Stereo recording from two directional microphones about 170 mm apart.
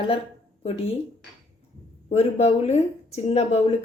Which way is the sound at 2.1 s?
40° left (ahead or behind).